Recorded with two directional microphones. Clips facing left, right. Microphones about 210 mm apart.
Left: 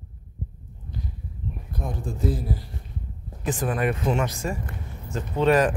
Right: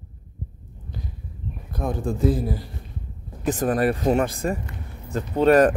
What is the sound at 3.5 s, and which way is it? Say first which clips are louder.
Speech: right 4 dB; 40° right (ahead or behind).